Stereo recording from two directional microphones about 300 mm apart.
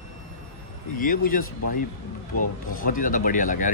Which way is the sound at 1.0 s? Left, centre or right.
Left.